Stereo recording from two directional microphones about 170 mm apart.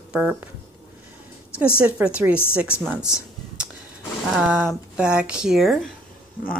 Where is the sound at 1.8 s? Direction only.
5° right (ahead or behind).